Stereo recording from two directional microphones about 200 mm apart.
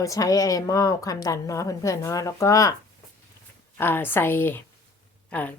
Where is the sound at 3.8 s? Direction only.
10° left (ahead or behind).